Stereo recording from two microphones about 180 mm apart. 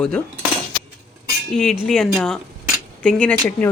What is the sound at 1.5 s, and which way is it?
A woman's voice, 5° left (ahead or behind).